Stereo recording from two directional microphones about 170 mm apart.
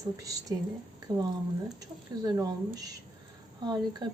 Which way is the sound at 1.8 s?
20° right (ahead or behind).